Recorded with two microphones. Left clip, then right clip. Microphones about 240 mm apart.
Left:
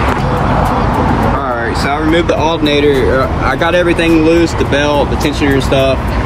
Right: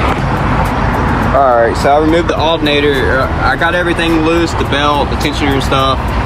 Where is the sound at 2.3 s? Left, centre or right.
Centre.